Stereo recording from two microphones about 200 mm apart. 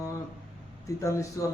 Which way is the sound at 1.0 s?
15° left (ahead or behind).